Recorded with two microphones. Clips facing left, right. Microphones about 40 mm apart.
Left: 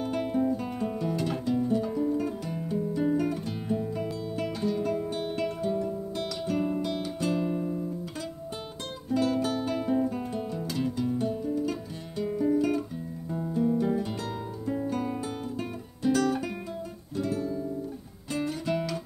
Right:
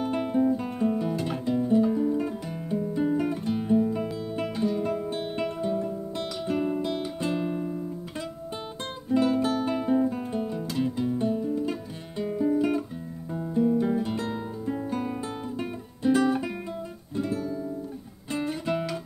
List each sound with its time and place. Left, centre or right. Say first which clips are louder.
0.0 s guitar: right 2 dB; centre
0.3 s music: right 5 dB; centre
5.2 s music: right 1 dB; centre
9.1 s guitar: right 3 dB; centre
11.1 s music: right 2 dB; centre
12.2 s guitar: right 1 dB; centre
13.3 s music: right 3 dB; centre
18.3 s guitar: right 1 dB; centre